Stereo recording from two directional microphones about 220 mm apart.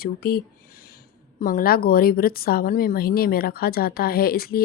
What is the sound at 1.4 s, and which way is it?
Speech, 40° left (ahead or behind).